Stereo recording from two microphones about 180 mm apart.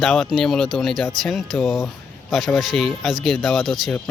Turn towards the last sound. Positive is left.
turn(degrees=0)  # may be behind; listen again after turning